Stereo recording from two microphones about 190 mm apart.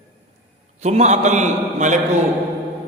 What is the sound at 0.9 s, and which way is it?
A man's voice, 35° right (ahead or behind).